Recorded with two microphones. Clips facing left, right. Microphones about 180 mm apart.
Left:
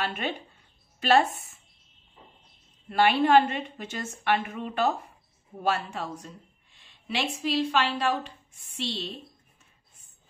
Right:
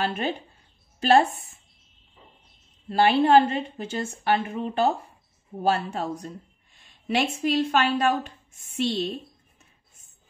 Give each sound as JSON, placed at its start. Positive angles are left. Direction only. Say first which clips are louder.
{"t": 0.0, "sound": "a woman's voice", "louder": "right 4 dB", "side_deg": -35}
{"t": 2.9, "sound": "a woman's voice", "louder": "right 3 dB", "side_deg": -30}